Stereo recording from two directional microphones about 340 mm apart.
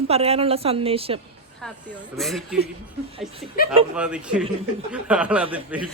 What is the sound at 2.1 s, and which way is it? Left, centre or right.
Speech, centre.